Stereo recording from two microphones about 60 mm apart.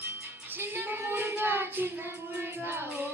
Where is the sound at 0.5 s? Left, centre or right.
Right.